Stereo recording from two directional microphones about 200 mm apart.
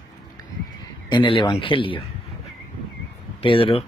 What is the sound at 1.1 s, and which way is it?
Speech, 25° left (ahead or behind).